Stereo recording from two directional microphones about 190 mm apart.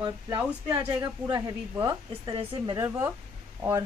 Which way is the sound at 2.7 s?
15° right (ahead or behind).